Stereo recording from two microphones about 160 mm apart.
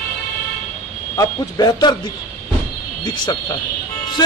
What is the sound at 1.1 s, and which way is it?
Speech, 25° left (ahead or behind).